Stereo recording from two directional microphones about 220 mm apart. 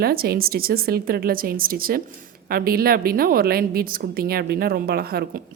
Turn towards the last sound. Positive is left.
turn(degrees=-45)  # may be behind; listen again after turning